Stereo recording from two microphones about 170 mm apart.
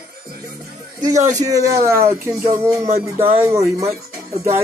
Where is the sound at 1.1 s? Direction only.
45° right (ahead or behind).